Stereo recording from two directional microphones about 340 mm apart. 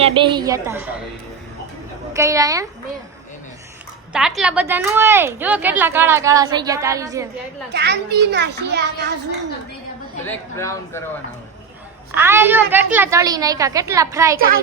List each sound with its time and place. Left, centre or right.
0.0 s a woman's voice: centre
2.1 s a woman's voice: centre
4.1 s a woman's voice: centre
7.7 s a child's voice: right
10.2 s a man's voice: centre
12.1 s a woman's voice: centre
14.3 s a child's voice: right